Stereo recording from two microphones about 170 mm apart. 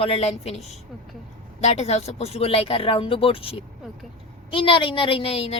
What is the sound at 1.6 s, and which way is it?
A woman's voice, 40° left (ahead or behind).